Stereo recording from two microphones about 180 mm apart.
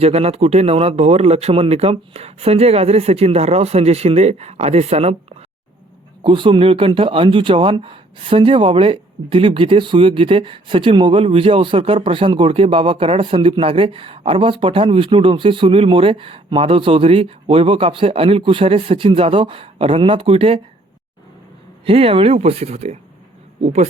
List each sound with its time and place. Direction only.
0.0 s a man's voice: 35° right (ahead or behind)
6.2 s a man's voice: 25° right (ahead or behind)
21.8 s a man's voice: 30° right (ahead or behind)